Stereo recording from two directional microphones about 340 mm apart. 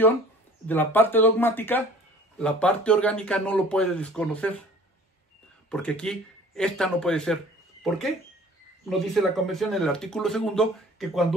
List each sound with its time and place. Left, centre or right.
0.7 s speech: centre
5.7 s speech: centre
8.8 s speech: centre